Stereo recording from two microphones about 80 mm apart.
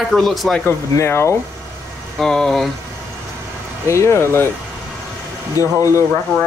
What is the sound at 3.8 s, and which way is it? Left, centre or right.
Speech, left.